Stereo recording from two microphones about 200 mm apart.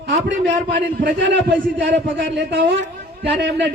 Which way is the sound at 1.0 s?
60° right (ahead or behind).